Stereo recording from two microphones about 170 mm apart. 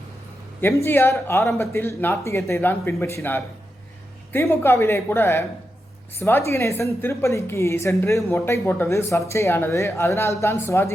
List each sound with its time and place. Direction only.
0.9 s speech: 15° left (ahead or behind)